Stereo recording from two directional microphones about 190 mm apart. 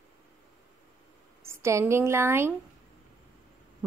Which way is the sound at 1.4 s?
15° right (ahead or behind).